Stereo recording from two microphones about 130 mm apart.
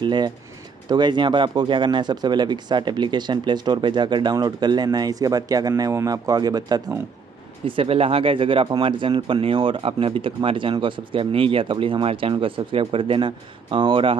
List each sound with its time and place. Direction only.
0.0 s speech: 35° right (ahead or behind)
7.6 s speech: 45° right (ahead or behind)